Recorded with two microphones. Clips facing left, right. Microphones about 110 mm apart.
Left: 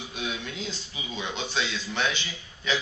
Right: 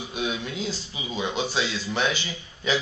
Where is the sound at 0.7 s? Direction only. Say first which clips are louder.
Right 4 dB; 5° right (ahead or behind).